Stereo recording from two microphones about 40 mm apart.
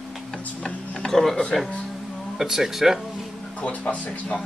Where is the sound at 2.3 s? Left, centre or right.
Centre.